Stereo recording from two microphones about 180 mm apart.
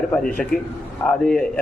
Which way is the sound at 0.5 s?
55° left (ahead or behind).